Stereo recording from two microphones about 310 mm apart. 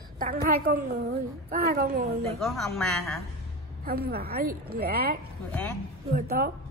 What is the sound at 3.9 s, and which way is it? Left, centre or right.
A woman's voice, right.